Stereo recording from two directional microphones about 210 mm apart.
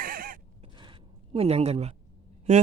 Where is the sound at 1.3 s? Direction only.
30° right (ahead or behind).